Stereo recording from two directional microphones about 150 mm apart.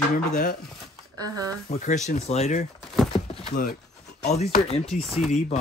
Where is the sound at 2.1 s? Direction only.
45° left (ahead or behind).